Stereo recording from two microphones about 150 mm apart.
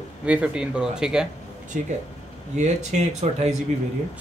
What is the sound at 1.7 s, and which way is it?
Speech, 65° right (ahead or behind).